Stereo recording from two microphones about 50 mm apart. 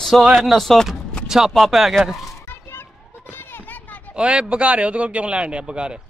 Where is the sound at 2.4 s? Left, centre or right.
Left.